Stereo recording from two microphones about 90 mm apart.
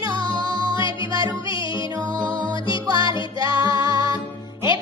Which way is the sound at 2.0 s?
50° right (ahead or behind).